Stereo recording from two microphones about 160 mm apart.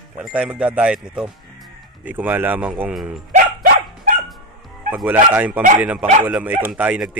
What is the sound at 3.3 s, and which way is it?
Dog, 60° right (ahead or behind).